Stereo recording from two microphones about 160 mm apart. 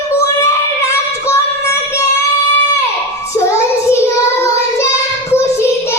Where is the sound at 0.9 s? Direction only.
15° left (ahead or behind).